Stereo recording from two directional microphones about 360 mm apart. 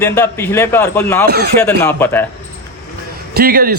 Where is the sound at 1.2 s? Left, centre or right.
Right.